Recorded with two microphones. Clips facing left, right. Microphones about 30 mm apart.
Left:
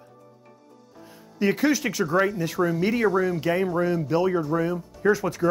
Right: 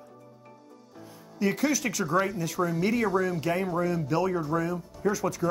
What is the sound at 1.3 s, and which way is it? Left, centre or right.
Speech, left.